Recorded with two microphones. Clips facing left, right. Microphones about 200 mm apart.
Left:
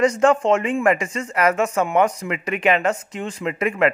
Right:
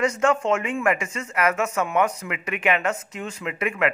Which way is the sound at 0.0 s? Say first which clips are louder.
Left 5 dB; 35° left (ahead or behind).